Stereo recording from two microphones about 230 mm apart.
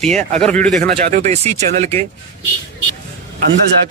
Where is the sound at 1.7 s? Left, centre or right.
Right.